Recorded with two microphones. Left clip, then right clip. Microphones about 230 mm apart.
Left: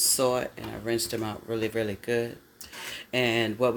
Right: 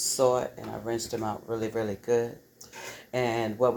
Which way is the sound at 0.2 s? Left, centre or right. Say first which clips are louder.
Right 2 dB; left.